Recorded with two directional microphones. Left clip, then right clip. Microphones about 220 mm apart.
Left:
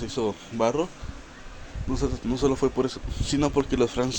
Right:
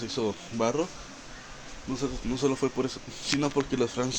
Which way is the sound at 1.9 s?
25° left (ahead or behind).